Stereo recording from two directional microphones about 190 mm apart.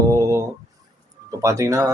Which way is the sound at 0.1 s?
15° right (ahead or behind).